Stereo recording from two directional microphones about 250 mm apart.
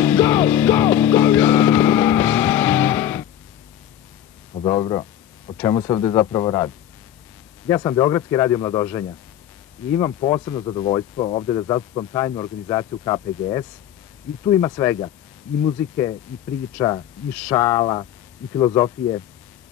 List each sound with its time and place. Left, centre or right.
0.0 s music: centre
4.6 s a man's voice: centre